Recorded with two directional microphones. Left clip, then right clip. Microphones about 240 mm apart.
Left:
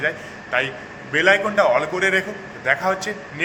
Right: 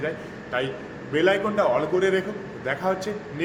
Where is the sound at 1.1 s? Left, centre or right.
Centre.